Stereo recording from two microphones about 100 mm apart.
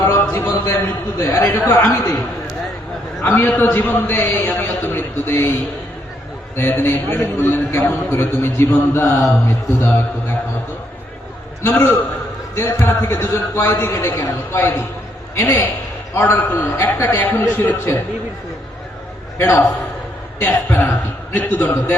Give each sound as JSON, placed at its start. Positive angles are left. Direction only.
{"t": 0.0, "sound": "a sound", "side_deg": 25}
{"t": 1.2, "sound": "a man's voice", "side_deg": 30}
{"t": 3.2, "sound": "a man's voice", "side_deg": 20}
{"t": 6.6, "sound": "a man's voice", "side_deg": 25}
{"t": 11.6, "sound": "a man's voice", "side_deg": 25}
{"t": 19.4, "sound": "a man's voice", "side_deg": 20}